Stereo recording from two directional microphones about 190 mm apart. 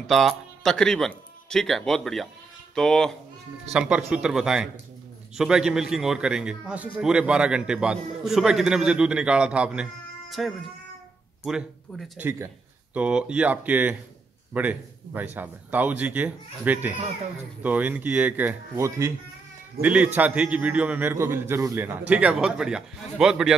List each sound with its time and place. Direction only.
0.0 s a man's voice: centre (ahead or behind)